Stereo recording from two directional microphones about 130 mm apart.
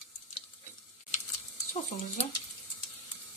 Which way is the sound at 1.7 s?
65° left (ahead or behind).